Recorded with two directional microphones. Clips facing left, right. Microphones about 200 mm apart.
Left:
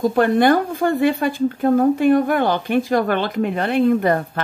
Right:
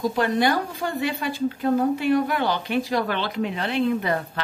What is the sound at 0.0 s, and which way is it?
A woman's voice, 55° left (ahead or behind).